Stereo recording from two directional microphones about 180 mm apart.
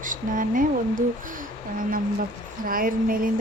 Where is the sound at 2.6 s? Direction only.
50° right (ahead or behind).